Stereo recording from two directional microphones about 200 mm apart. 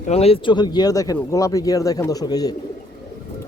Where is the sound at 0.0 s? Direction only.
30° left (ahead or behind).